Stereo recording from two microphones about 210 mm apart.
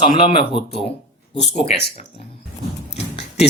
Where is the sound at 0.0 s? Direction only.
25° left (ahead or behind).